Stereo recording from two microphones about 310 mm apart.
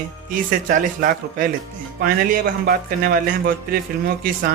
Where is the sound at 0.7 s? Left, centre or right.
Right.